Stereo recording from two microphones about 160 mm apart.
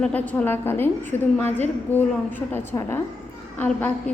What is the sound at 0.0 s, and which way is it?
A woman's voice, 10° left (ahead or behind).